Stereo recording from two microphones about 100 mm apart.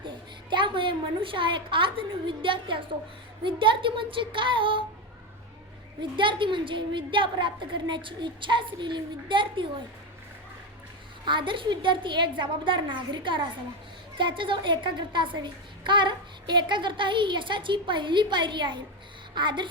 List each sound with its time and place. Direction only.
0.5 s a woman's voice: 55° right (ahead or behind)
6.0 s a woman's voice: 55° right (ahead or behind)
11.3 s a woman's voice: 55° right (ahead or behind)